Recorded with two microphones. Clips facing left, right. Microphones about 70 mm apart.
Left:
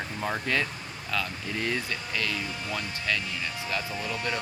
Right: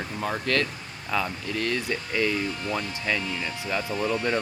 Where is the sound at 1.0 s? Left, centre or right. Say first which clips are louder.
Right 4 dB; centre.